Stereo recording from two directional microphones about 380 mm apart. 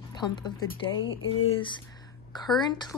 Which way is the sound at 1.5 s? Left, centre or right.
Centre.